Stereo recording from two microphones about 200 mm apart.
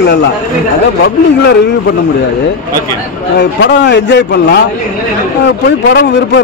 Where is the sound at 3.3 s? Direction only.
60° left (ahead or behind).